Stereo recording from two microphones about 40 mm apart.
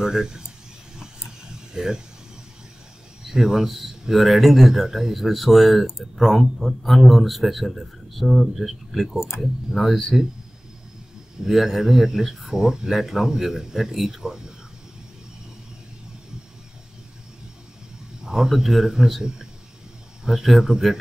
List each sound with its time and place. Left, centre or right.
0.0 s speech: centre
0.9 s vehicle: centre
3.3 s a man's voice: centre
11.4 s speech: centre
18.2 s speech: centre
20.2 s speech: centre